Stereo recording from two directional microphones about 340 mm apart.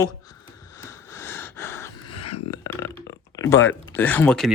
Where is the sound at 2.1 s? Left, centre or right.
Left.